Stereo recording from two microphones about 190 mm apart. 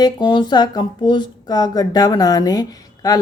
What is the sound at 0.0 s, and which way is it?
Speech, 25° left (ahead or behind).